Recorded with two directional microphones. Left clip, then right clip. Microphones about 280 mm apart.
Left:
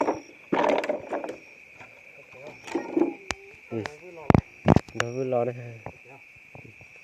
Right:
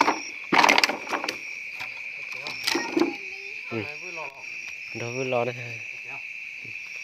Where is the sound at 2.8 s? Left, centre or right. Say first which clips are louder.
Left 2 dB; right.